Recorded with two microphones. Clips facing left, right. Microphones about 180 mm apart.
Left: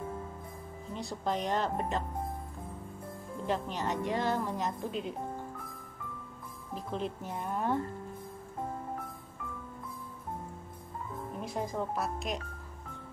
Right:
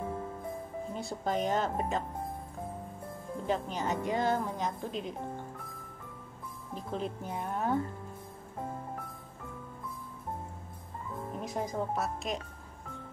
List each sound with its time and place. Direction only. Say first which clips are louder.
0.9 s a woman's voice: even; centre (ahead or behind)
3.4 s a woman's voice: right 1 dB; centre (ahead or behind)
6.9 s a woman's voice: right 1 dB; centre (ahead or behind)
11.5 s a woman's voice: right 1 dB; centre (ahead or behind)